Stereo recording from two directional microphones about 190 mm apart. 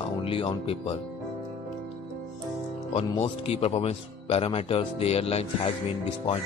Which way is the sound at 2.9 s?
30° left (ahead or behind).